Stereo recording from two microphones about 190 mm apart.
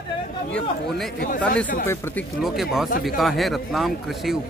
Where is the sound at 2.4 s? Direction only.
Centre (ahead or behind).